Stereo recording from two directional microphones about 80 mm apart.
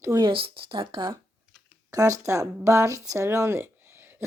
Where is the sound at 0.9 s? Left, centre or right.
Right.